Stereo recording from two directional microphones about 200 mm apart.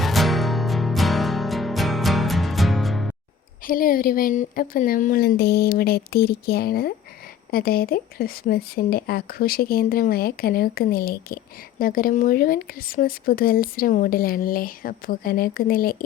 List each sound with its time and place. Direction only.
0.0 s music: centre (ahead or behind)
3.7 s speech: 45° left (ahead or behind)